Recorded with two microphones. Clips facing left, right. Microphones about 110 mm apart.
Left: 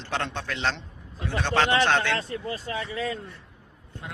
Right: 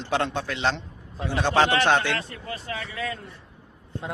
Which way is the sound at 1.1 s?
30° right (ahead or behind).